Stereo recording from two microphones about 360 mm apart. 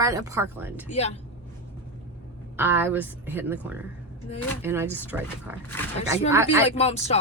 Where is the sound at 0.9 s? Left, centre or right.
Centre.